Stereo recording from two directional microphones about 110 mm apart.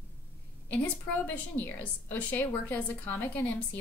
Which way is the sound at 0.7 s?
15° left (ahead or behind).